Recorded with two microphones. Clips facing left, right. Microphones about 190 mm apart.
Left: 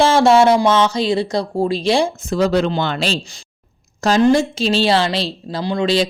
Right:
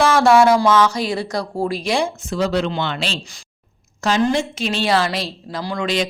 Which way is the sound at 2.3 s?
40° left (ahead or behind).